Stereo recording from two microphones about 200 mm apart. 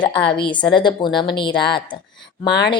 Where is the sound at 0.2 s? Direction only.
55° left (ahead or behind).